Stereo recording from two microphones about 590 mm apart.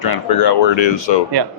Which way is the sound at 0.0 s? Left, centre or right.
Left.